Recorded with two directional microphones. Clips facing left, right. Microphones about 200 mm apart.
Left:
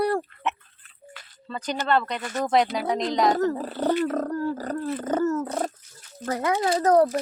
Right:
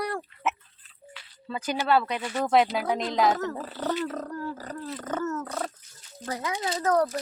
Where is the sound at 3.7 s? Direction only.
55° left (ahead or behind).